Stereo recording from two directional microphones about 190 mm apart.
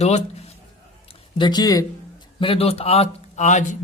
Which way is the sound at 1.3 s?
20° left (ahead or behind).